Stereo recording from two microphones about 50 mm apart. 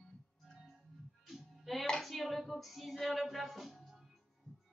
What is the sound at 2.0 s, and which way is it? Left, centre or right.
Hands, centre.